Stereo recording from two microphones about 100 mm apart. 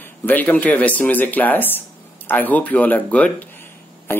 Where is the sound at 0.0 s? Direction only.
20° left (ahead or behind).